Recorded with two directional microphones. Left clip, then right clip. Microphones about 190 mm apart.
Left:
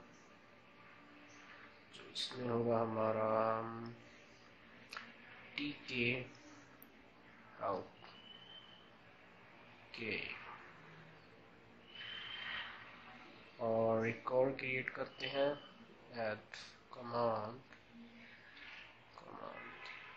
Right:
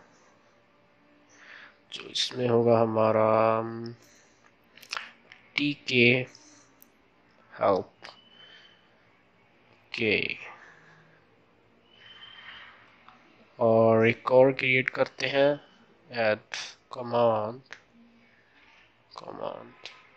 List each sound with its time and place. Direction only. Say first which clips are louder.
1.9 s speech: right 14 dB; 45° right (ahead or behind)
5.5 s speech: right 16 dB; 50° right (ahead or behind)
9.8 s speech: right 16 dB; 50° right (ahead or behind)
13.6 s speech: right 14 dB; 45° right (ahead or behind)
19.1 s speech: right 14 dB; 40° right (ahead or behind)